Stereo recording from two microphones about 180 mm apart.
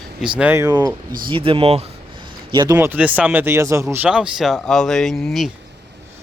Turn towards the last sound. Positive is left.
turn(degrees=0)  # may be behind; listen again after turning